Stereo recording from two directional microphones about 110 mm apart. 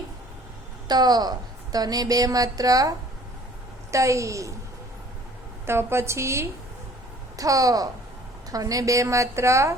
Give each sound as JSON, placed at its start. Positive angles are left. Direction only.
{"t": 0.9, "sound": "a woman's voice", "side_deg": -40}
{"t": 3.9, "sound": "a woman's voice", "side_deg": -30}
{"t": 5.6, "sound": "a woman's voice", "side_deg": -25}